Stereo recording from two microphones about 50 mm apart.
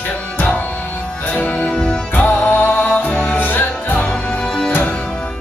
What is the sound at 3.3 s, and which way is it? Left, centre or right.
Music, left.